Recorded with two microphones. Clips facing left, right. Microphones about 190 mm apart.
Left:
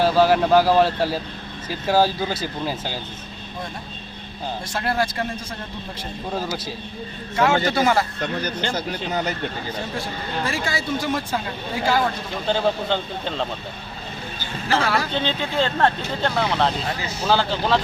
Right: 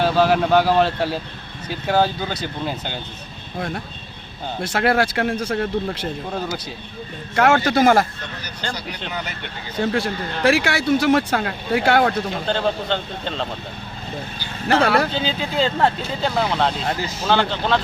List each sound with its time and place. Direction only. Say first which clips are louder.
0.0 s speech: even; centre (ahead or behind)
4.6 s speech: right 6 dB; 70° right (ahead or behind)
6.3 s speech: left 3 dB; centre (ahead or behind)
7.3 s a man's voice: right 3 dB; 60° right (ahead or behind)
8.7 s speech: left 4 dB; 45° left (ahead or behind)
9.8 s speech: right 7 dB; 75° right (ahead or behind)
12.5 s speech: left 3 dB; 5° left (ahead or behind)
14.8 s speech: right 5 dB; 60° right (ahead or behind)
15.1 s speech: even; 5° right (ahead or behind)